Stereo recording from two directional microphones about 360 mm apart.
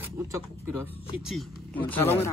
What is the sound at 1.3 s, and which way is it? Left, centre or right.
Speech, centre.